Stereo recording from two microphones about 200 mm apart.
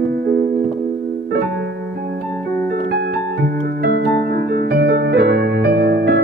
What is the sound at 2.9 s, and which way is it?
Music, 55° right (ahead or behind).